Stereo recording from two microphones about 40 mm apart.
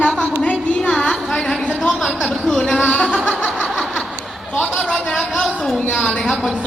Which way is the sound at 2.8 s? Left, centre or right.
Left.